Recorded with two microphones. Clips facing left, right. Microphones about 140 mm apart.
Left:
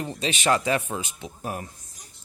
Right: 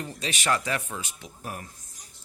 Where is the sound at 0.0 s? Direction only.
25° left (ahead or behind).